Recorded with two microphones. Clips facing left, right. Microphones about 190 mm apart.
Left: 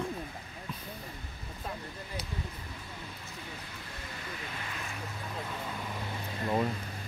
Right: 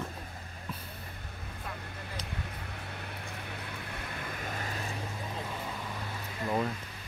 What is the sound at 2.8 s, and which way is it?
Vehicle, 65° right (ahead or behind).